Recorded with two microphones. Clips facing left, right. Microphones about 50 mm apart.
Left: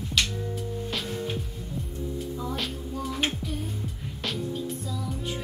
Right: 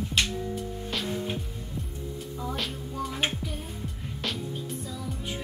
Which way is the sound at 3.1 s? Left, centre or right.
Centre.